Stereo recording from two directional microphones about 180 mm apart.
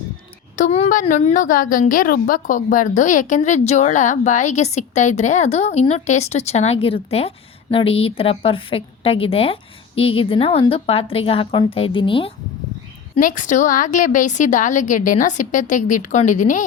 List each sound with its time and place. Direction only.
0.5 s a woman's voice: 40° left (ahead or behind)
13.1 s a woman's voice: 45° left (ahead or behind)